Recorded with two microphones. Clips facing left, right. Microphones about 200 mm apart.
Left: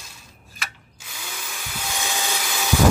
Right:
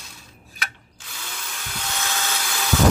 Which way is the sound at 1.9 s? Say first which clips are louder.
Left 1 dB; 15° left (ahead or behind).